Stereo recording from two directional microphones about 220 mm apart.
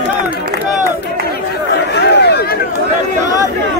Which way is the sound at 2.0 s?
50° left (ahead or behind).